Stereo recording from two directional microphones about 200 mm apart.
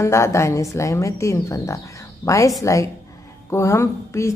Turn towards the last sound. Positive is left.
turn(degrees=15)  # may be behind; listen again after turning